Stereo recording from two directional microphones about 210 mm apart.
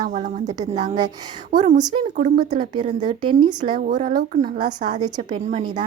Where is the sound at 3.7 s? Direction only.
40° right (ahead or behind).